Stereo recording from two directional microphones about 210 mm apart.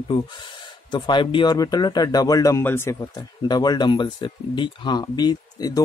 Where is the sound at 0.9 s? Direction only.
20° left (ahead or behind).